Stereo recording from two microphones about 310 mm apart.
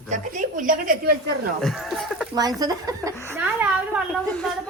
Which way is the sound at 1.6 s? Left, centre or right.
Centre.